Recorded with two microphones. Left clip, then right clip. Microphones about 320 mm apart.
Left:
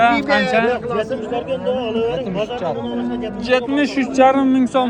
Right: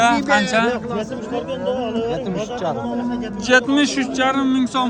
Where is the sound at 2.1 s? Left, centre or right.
Right.